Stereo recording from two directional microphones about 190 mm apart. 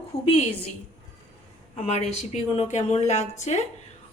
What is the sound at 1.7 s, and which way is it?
Speech, 35° left (ahead or behind).